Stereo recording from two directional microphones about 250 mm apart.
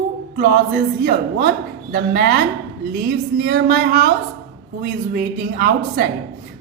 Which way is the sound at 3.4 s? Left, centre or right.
Right.